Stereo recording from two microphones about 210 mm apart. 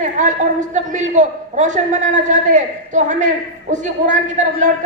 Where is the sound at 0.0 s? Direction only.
35° right (ahead or behind).